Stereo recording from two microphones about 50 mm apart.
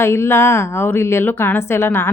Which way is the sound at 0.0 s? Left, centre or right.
Left.